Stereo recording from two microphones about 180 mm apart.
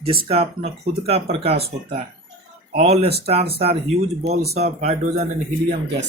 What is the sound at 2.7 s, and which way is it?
Speech, 35° right (ahead or behind).